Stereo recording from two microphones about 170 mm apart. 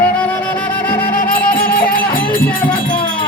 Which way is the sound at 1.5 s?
60° left (ahead or behind).